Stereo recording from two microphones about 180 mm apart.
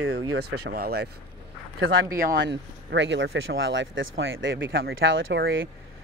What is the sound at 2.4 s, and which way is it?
Speech, 80° right.